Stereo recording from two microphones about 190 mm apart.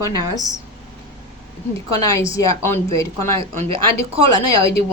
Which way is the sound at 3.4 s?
30° right (ahead or behind).